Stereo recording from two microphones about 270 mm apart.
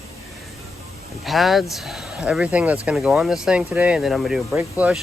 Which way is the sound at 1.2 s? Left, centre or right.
Centre.